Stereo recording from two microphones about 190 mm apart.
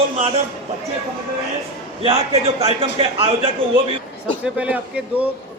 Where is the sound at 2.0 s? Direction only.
30° right (ahead or behind).